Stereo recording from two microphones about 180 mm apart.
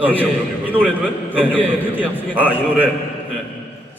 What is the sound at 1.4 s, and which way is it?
Speech, 10° left (ahead or behind).